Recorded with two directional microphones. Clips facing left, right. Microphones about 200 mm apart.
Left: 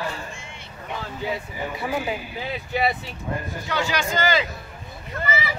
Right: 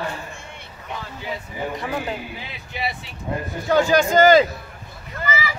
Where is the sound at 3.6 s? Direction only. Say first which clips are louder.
Right 10 dB; 45° right (ahead or behind).